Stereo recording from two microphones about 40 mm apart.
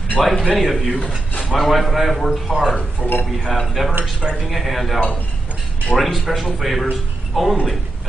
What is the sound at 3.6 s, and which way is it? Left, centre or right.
Speech, centre.